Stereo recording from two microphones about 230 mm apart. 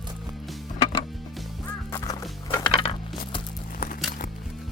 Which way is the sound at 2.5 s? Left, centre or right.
Left.